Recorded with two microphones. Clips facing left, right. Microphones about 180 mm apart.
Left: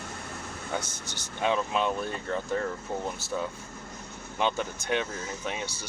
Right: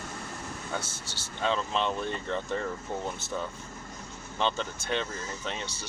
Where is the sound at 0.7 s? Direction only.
15° left (ahead or behind).